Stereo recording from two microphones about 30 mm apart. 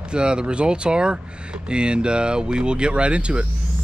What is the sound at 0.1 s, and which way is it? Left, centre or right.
Speech, right.